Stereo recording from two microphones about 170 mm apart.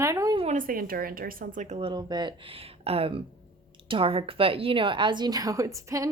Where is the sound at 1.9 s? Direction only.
25° right (ahead or behind).